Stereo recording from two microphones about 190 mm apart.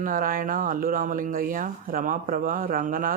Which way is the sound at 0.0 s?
45° right (ahead or behind).